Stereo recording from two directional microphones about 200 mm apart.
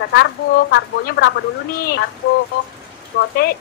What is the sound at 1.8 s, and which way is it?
Speech, 50° left (ahead or behind).